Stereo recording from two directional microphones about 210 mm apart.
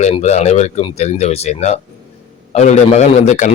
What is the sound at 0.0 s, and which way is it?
A man's voice, 35° left (ahead or behind).